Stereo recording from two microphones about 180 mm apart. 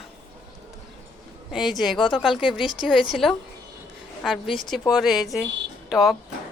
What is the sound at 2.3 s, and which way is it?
Speech, 25° left (ahead or behind).